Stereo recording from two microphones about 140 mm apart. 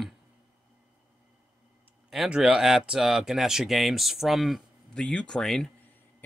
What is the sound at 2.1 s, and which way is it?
Speech, 5° right (ahead or behind).